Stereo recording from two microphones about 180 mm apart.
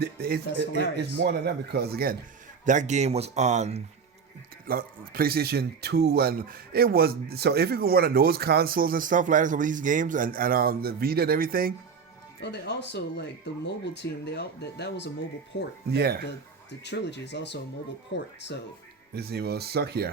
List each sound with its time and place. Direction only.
0.0 s speech: 60° right (ahead or behind)
2.6 s speech: 40° right (ahead or behind)
4.6 s speech: 55° right (ahead or behind)
12.4 s speech: 70° left (ahead or behind)
15.9 s speech: 65° right (ahead or behind)
16.8 s speech: 70° left (ahead or behind)
19.1 s speech: 60° right (ahead or behind)